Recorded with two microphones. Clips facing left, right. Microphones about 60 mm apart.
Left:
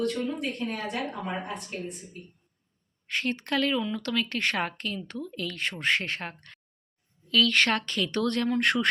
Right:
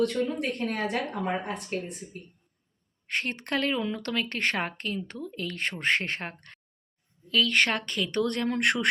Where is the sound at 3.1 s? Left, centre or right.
Right.